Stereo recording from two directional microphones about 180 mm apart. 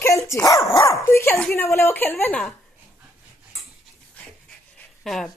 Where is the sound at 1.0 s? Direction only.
15° left (ahead or behind).